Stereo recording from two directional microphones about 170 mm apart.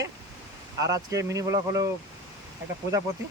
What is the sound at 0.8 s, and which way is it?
Speech, 20° right (ahead or behind).